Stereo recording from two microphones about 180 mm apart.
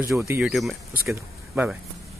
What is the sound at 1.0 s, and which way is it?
Speech, 15° right (ahead or behind).